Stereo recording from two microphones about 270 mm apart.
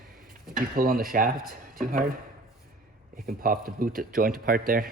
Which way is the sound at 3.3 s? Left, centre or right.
Right.